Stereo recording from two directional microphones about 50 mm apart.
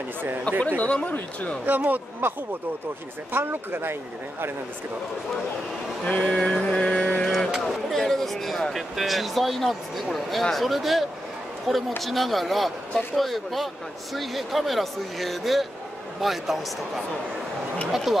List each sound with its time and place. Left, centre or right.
0.2 s a man's voice: right
0.7 s mantra: left
1.7 s a man's voice: right
3.3 s speech: right
6.0 s mantra: left
7.6 s a sound: centre
8.7 s speech: centre